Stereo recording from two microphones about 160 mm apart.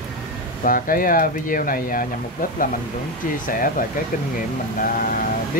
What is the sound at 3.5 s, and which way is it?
Speech, 60° left (ahead or behind).